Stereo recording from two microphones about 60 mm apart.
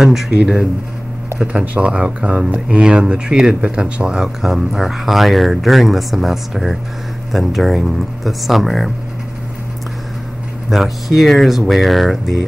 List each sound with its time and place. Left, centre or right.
0.0 s speech: centre
10.7 s speech: centre